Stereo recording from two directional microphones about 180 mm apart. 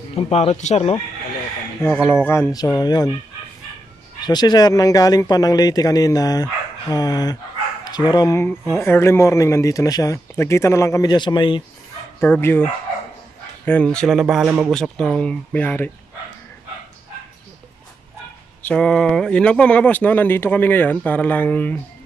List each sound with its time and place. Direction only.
0.1 s speech: 35° left (ahead or behind)
2.0 s speech: 10° left (ahead or behind)
4.2 s speech: 25° left (ahead or behind)
12.2 s speech: 10° left (ahead or behind)
13.7 s speech: 5° left (ahead or behind)
18.6 s speech: 5° left (ahead or behind)